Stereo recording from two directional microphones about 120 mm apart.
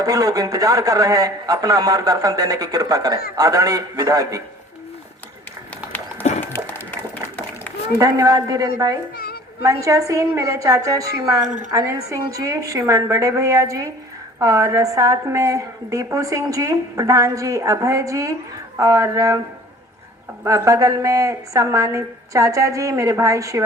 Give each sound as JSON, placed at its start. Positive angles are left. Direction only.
{"t": 0.0, "sound": "a man's voice", "side_deg": -30}
{"t": 6.2, "sound": "a sound", "side_deg": 75}
{"t": 6.7, "sound": "a sound", "side_deg": 15}
{"t": 7.9, "sound": "a man's voice", "side_deg": -30}
{"t": 11.4, "sound": "a woman's voice", "side_deg": -90}
{"t": 11.7, "sound": "a woman's voice", "side_deg": -30}
{"t": 20.4, "sound": "a woman's voice", "side_deg": -25}